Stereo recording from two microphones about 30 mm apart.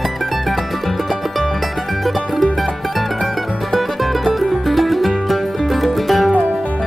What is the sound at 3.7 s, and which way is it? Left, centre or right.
Music, centre.